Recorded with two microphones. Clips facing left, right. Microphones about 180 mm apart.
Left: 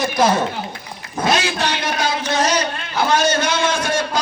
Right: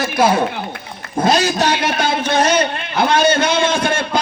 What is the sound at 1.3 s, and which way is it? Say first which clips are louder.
Speech: right 5 dB; 40° right (ahead or behind).